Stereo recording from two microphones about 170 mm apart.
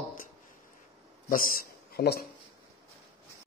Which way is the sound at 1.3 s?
55° left (ahead or behind).